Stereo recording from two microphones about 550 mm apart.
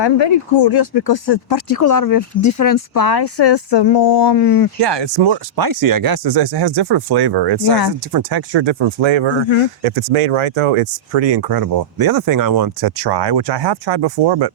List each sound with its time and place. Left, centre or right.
0.0 s speech: left
4.8 s speech: right
9.8 s speech: right